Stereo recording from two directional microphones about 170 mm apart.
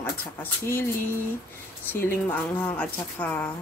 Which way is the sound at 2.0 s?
10° left (ahead or behind).